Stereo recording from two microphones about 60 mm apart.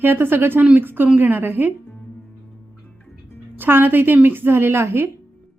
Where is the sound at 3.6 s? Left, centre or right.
Right.